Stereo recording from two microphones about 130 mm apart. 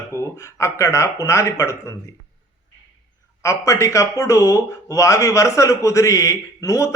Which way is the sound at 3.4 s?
25° left (ahead or behind).